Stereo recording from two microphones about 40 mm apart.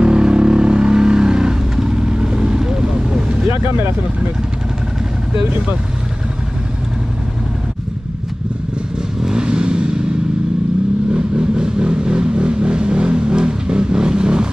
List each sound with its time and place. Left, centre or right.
0.0 s vehicle: right
9.2 s vehicle: right
11.1 s vehicle: right